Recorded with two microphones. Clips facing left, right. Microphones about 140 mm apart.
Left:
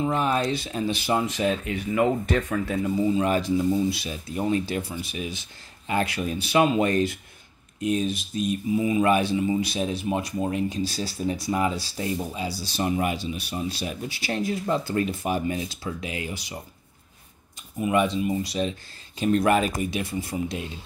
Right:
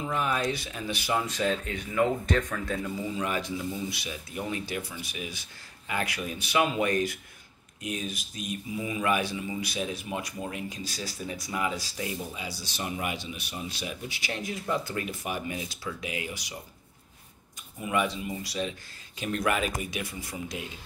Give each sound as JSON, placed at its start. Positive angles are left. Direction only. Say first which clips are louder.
{"t": 0.0, "sound": "speech", "louder": "left 5 dB", "side_deg": 30}
{"t": 1.5, "sound": "speech", "louder": "left 5 dB", "side_deg": 10}
{"t": 3.2, "sound": "speech", "louder": "left 8 dB", "side_deg": 35}
{"t": 17.7, "sound": "speech", "louder": "left 6 dB", "side_deg": 20}